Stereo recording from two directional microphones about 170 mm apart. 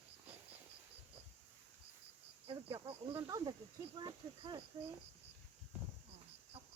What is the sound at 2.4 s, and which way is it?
Speech, 30° right (ahead or behind).